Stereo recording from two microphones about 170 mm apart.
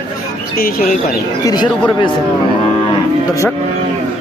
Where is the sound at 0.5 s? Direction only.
60° left (ahead or behind).